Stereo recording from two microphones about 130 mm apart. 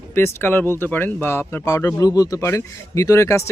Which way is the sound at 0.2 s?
15° left (ahead or behind).